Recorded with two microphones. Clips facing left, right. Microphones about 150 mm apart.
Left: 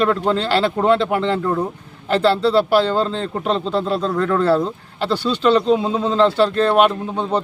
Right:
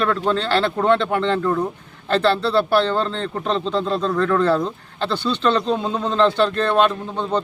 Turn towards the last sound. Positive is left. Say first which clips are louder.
# left 2 dB
turn(degrees=10)  # may be behind; listen again after turning